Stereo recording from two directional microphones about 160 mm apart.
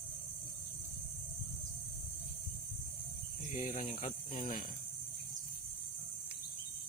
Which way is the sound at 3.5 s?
50° left (ahead or behind).